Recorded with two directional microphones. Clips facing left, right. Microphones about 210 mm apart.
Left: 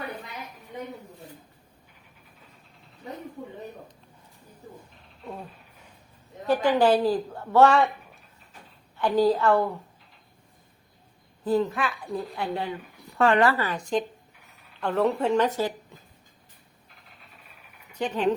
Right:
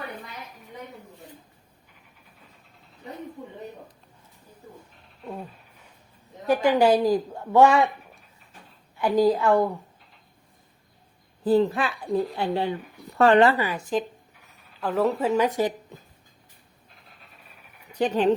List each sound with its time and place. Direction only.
6.5 s a woman's voice: 10° right (ahead or behind)
9.0 s a woman's voice: 10° right (ahead or behind)
11.4 s a woman's voice: 30° right (ahead or behind)
13.4 s speech: 20° right (ahead or behind)
13.7 s a woman's voice: 5° right (ahead or behind)
17.9 s speech: 35° right (ahead or behind)